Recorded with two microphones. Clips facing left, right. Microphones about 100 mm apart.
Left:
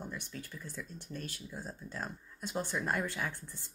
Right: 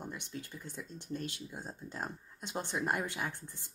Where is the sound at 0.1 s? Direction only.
25° right (ahead or behind).